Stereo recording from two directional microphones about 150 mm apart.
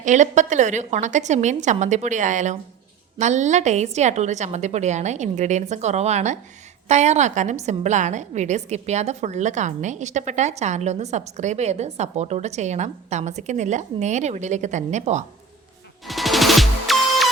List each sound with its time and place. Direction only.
0.0 s a woman's voice: 55° right (ahead or behind)
16.0 s music: centre (ahead or behind)